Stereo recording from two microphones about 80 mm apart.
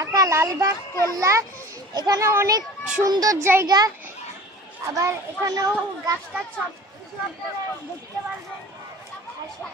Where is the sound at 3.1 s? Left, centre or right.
Right.